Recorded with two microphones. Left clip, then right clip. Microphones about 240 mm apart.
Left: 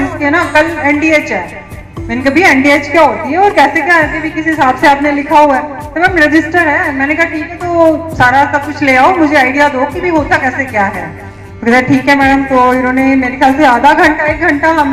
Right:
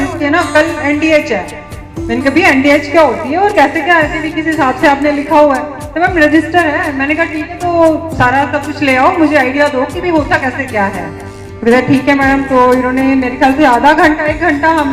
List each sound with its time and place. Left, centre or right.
0.2 s a woman's voice: right